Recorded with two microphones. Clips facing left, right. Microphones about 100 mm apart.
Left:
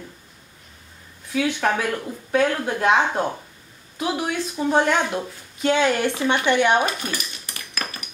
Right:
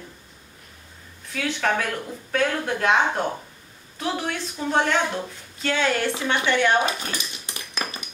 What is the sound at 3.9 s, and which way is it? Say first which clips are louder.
Speech: left 3 dB; 10° left (ahead or behind).